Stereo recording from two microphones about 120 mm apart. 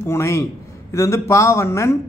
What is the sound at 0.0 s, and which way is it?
A man's voice, 25° left (ahead or behind).